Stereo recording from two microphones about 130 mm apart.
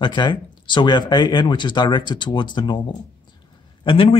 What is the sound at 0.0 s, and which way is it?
Speech, 35° left (ahead or behind).